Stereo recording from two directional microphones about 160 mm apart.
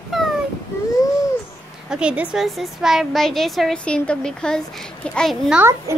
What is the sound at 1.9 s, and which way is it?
A woman's voice, 5° right (ahead or behind).